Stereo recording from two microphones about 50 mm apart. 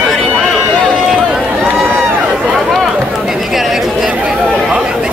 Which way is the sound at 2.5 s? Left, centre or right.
Centre.